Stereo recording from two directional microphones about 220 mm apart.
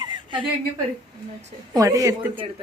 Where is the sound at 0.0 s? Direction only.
20° right (ahead or behind).